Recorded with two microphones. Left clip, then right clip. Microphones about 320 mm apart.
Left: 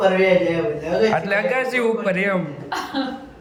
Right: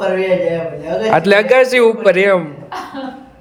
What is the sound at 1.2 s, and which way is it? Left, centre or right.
A man's voice, right.